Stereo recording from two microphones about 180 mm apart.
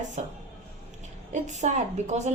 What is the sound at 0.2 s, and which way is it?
A woman's voice, 40° right (ahead or behind).